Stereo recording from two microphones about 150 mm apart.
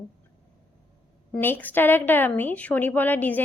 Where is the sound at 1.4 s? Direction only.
15° left (ahead or behind).